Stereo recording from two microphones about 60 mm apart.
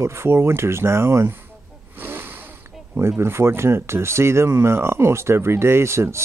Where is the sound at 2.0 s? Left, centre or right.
Right.